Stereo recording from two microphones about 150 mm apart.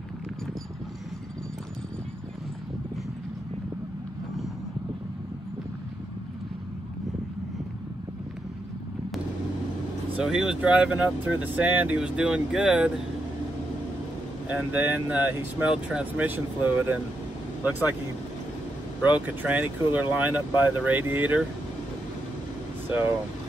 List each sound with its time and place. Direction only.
10.1 s speech: 5° right (ahead or behind)
14.5 s speech: 10° right (ahead or behind)
18.9 s speech: 10° right (ahead or behind)